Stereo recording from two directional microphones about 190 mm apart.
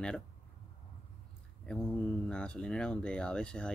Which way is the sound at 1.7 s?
5° left (ahead or behind).